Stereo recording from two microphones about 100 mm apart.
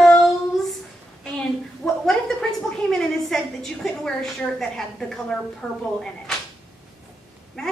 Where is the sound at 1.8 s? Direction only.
10° left (ahead or behind).